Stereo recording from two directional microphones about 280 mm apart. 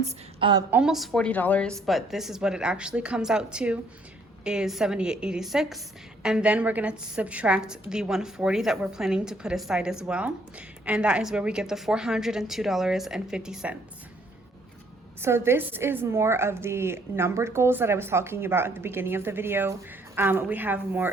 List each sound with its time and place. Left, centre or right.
0.0 s a woman's voice: centre
0.7 s a woman's voice: centre
15.2 s a woman's voice: centre